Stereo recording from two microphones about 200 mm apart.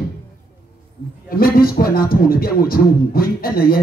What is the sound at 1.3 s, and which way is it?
Speech, 50° left (ahead or behind).